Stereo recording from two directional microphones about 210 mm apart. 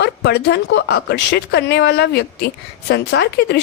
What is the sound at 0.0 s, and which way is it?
Speech, 50° left (ahead or behind).